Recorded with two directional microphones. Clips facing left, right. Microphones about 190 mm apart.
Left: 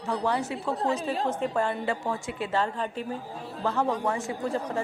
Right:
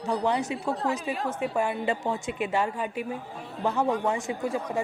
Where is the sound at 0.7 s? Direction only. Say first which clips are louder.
Left 1 dB; 30° left (ahead or behind).